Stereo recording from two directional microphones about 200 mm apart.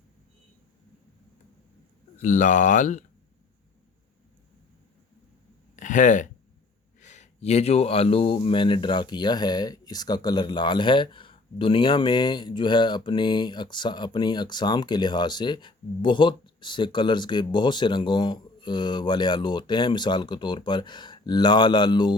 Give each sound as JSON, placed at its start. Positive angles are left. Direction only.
{"t": 2.2, "sound": "speech", "side_deg": 40}
{"t": 5.7, "sound": "a sound", "side_deg": 40}
{"t": 7.0, "sound": "speech", "side_deg": 35}